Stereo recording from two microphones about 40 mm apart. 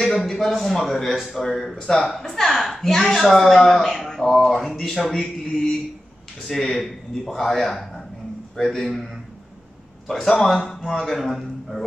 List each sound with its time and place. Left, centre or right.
0.0 s a woman's voice: centre
1.8 s a woman's voice: centre
2.0 s a woman's voice: centre
10.0 s a woman's voice: centre
11.1 s a man's voice: centre